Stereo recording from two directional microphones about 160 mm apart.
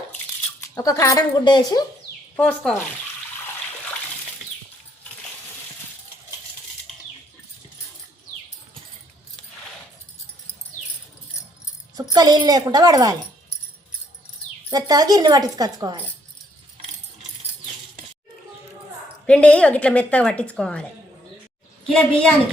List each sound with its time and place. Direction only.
0.8 s a woman's voice: 20° left (ahead or behind)
2.3 s a woman's voice: 5° left (ahead or behind)
12.1 s a woman's voice: 25° right (ahead or behind)
14.7 s a woman's voice: 25° right (ahead or behind)
19.2 s a woman's voice: 5° left (ahead or behind)
21.9 s a woman's voice: 10° left (ahead or behind)